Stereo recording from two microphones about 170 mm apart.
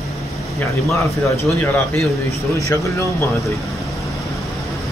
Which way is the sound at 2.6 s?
15° left (ahead or behind).